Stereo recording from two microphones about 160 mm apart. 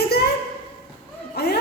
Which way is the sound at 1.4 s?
90° left.